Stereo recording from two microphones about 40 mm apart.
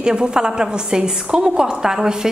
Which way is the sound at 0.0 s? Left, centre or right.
Right.